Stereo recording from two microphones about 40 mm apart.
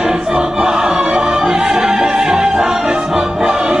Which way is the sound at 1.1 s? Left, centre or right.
Right.